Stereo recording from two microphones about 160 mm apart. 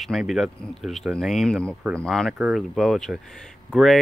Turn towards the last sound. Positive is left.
turn(degrees=0)  # may be behind; listen again after turning